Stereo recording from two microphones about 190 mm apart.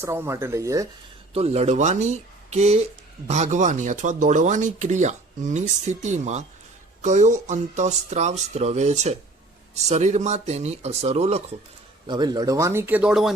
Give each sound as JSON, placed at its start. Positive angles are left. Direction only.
{"t": 0.0, "sound": "speech", "side_deg": -15}
{"t": 1.3, "sound": "speech", "side_deg": -35}
{"t": 12.0, "sound": "speech", "side_deg": -25}